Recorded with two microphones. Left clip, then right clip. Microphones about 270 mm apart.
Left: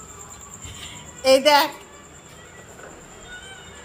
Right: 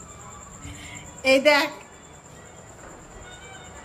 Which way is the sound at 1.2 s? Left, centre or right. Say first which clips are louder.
Left 3 dB; centre.